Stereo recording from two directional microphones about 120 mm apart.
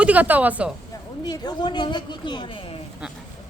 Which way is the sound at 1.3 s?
35° left (ahead or behind).